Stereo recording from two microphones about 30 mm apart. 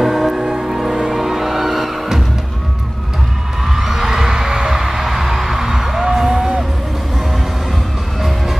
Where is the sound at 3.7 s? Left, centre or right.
Centre.